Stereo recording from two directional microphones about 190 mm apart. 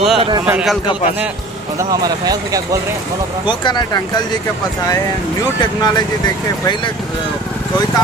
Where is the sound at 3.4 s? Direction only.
25° left (ahead or behind).